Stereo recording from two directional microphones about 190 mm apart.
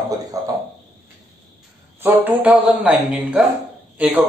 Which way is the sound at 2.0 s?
10° right (ahead or behind).